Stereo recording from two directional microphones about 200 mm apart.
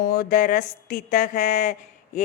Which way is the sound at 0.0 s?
45° left (ahead or behind).